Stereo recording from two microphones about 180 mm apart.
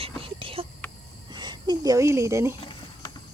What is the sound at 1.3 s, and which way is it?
Speech, 25° right (ahead or behind).